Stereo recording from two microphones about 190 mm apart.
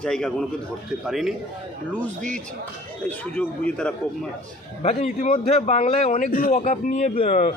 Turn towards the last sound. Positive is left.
turn(degrees=40)  # may be behind; listen again after turning